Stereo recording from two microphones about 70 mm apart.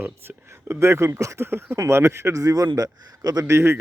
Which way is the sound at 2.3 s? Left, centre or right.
Right.